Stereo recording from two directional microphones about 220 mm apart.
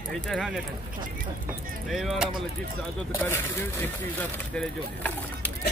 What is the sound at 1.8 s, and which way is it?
Speech, centre (ahead or behind).